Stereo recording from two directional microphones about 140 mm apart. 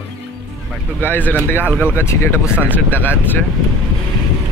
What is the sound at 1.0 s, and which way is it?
Speech, 15° left (ahead or behind).